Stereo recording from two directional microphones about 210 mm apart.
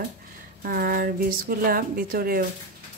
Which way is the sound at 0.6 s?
45° right (ahead or behind).